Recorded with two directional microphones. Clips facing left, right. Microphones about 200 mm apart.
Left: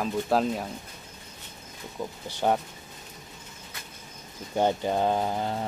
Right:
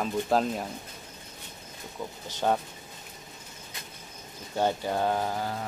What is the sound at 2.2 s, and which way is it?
Speech, 10° left (ahead or behind).